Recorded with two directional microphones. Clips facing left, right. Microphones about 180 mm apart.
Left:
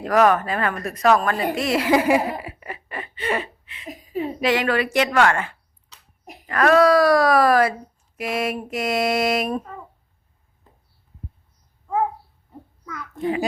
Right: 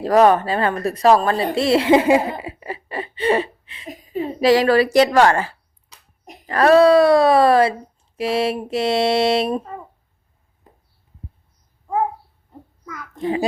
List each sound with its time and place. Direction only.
0.0 s speech: 30° right (ahead or behind)
1.5 s laughter: 30° right (ahead or behind)
4.2 s a woman's voice: 35° right (ahead or behind)